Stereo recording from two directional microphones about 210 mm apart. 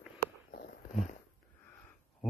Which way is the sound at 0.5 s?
40° left (ahead or behind).